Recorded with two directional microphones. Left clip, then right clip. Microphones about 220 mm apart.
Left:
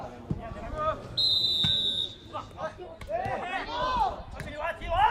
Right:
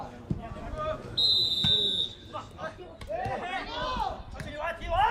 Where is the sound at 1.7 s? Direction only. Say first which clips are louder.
Right 1 dB; 40° left (ahead or behind).